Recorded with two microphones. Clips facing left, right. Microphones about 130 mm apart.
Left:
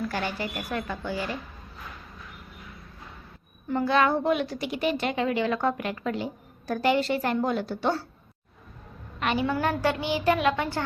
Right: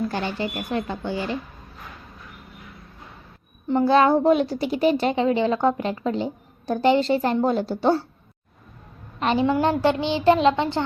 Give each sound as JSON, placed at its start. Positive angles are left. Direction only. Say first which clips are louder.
{"t": 0.1, "sound": "a woman's voice", "louder": "right 4 dB", "side_deg": -30}
{"t": 3.7, "sound": "a woman's voice", "louder": "right 6 dB", "side_deg": -30}
{"t": 9.2, "sound": "a woman's voice", "louder": "right 6 dB", "side_deg": -30}